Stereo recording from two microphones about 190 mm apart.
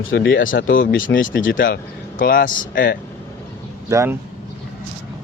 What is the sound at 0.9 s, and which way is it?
Speech, 90° left.